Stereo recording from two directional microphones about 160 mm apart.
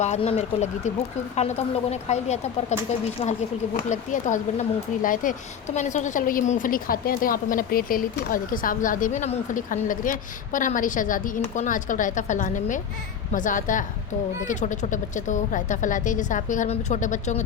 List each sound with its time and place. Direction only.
0.0 s speech: 40° left (ahead or behind)
3.2 s speech: 30° left (ahead or behind)
3.8 s a woman's voice: 50° left (ahead or behind)